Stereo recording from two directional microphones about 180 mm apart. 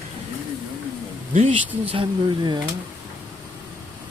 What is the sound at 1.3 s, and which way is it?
Speech, 45° right (ahead or behind).